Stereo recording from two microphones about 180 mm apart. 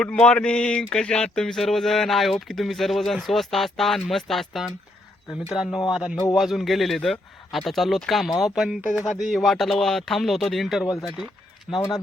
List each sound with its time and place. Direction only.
0.0 s a sound: 5° left (ahead or behind)
11.0 s speech: centre (ahead or behind)
11.7 s speech: 20° left (ahead or behind)